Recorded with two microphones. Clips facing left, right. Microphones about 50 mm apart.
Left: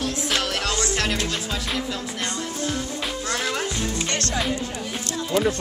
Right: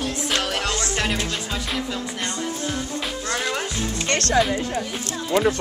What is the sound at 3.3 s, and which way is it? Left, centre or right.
Music, centre.